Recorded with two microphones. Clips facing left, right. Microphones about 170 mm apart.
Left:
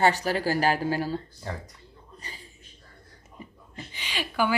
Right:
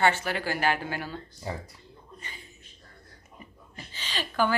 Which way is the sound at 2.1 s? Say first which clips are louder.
Left 2 dB; 35° left (ahead or behind).